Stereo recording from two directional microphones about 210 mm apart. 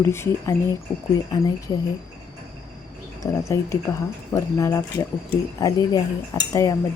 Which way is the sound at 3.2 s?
15° left (ahead or behind).